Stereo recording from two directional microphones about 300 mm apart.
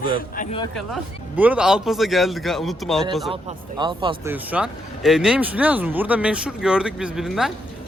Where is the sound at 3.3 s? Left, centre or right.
Centre.